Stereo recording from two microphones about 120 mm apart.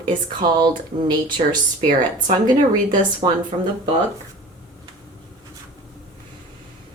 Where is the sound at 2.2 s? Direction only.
90° right.